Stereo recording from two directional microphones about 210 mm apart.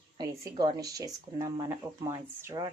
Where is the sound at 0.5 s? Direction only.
20° right (ahead or behind).